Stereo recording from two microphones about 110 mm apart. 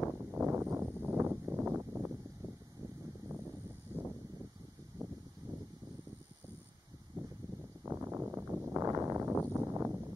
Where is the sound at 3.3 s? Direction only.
25° right (ahead or behind).